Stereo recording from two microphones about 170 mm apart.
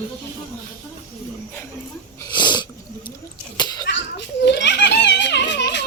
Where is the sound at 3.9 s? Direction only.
90° left.